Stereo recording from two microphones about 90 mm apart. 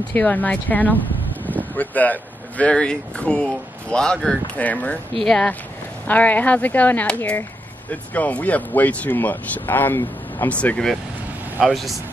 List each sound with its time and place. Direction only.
0.1 s speech: 20° left (ahead or behind)
11.6 s speech: centre (ahead or behind)